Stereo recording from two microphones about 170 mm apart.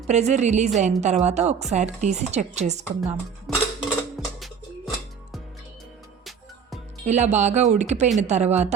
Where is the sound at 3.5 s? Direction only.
Centre (ahead or behind).